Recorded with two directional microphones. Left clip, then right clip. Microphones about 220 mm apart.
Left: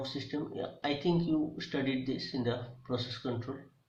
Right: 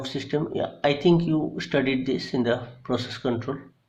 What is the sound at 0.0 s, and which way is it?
Speech, 50° right (ahead or behind).